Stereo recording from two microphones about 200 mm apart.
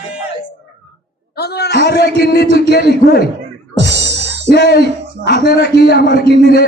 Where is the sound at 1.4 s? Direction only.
55° left (ahead or behind).